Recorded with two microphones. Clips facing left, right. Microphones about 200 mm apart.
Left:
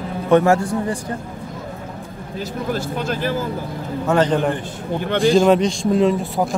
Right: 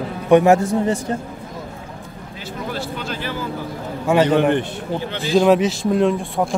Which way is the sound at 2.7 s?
45° left (ahead or behind).